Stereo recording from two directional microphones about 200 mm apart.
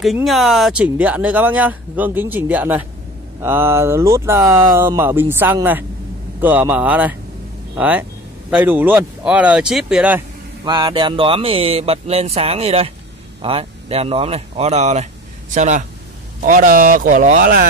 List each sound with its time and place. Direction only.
0.0 s speech: centre (ahead or behind)
10.6 s speech: 20° right (ahead or behind); by 17.6 s 45° right (ahead or behind)